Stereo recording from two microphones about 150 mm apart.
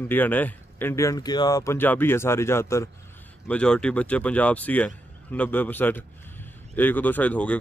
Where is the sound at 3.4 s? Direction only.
10° left (ahead or behind).